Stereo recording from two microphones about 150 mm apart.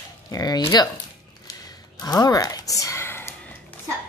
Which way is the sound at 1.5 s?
25° left (ahead or behind).